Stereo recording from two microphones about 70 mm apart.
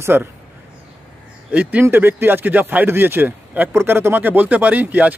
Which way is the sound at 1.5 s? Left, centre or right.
Right.